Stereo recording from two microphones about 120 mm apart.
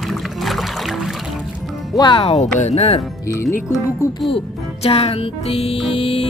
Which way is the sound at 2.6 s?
65° left (ahead or behind).